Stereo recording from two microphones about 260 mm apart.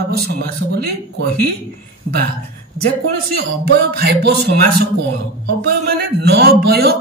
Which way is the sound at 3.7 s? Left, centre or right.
Right.